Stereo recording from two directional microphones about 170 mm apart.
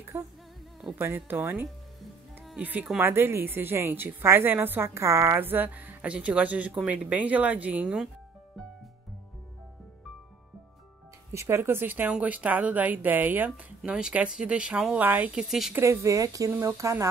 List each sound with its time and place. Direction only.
0.1 s a woman's voice: 10° right (ahead or behind)
11.3 s a woman's voice: 15° right (ahead or behind)
15.8 s a woman's voice: 15° right (ahead or behind)